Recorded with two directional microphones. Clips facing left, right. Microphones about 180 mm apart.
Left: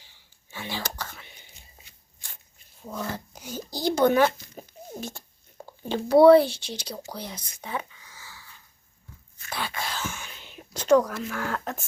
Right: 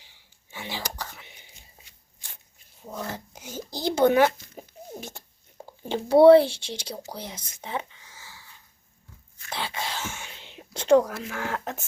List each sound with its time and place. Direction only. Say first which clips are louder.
0.5 s whispering: left 1 dB; 20° right (ahead or behind)
2.8 s a sound: left 1 dB; 20° right (ahead or behind)
5.9 s speech: right 1 dB; 25° right (ahead or behind)
9.5 s whispering: even; 25° right (ahead or behind)